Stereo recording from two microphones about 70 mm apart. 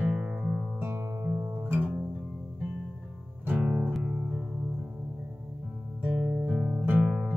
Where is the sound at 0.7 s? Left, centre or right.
Right.